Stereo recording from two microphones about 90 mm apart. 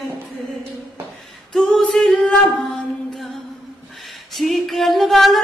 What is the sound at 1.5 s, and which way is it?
A capella, centre (ahead or behind).